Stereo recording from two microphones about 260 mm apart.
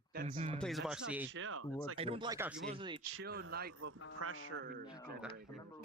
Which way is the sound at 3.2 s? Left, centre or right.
Right.